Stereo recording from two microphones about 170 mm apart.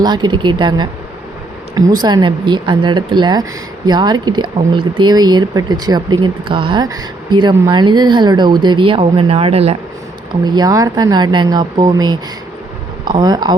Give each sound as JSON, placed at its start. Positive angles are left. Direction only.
{"t": 0.0, "sound": "speech", "side_deg": -25}
{"t": 10.4, "sound": "speech", "side_deg": -25}